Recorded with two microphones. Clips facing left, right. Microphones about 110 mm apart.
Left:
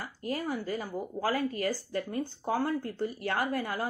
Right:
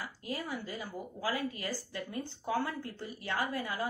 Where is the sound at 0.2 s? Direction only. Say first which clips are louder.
Left 7 dB; 45° left (ahead or behind).